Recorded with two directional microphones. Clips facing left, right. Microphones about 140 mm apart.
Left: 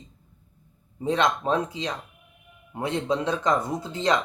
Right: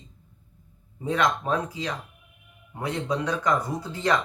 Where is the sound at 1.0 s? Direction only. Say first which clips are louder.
Left 1 dB; 25° left (ahead or behind).